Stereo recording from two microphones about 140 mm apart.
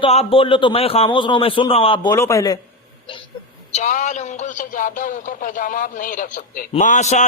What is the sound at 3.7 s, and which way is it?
Speech, 60° left (ahead or behind).